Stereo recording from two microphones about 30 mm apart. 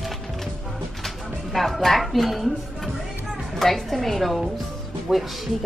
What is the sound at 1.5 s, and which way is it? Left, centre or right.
Speech, centre.